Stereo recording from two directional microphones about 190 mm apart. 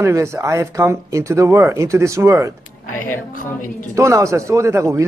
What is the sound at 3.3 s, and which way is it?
Speech, 45° left (ahead or behind).